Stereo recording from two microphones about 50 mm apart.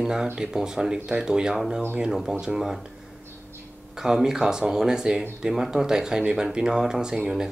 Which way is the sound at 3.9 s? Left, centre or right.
Centre.